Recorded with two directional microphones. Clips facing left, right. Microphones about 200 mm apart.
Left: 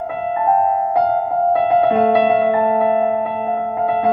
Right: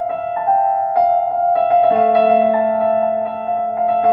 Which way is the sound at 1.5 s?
40° right (ahead or behind).